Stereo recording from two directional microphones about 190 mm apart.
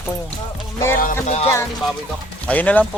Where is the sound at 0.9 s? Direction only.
40° left (ahead or behind).